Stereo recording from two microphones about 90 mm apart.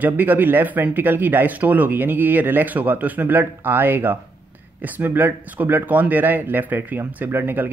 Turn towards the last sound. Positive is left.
turn(degrees=-20)  # may be behind; listen again after turning